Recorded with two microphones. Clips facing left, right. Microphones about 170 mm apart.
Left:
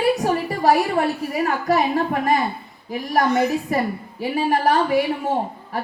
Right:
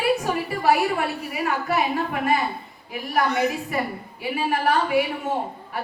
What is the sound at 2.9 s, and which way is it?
A woman's voice, 40° left (ahead or behind).